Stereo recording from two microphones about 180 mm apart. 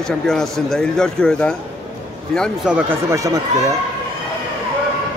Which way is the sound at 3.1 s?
20° right (ahead or behind).